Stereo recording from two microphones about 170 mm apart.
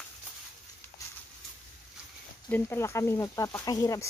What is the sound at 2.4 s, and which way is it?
Speech, 10° left (ahead or behind).